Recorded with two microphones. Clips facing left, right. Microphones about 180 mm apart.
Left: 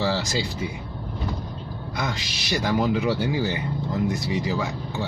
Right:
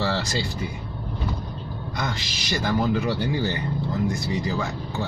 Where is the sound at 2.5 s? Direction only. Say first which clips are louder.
Left 1 dB; 15° left (ahead or behind).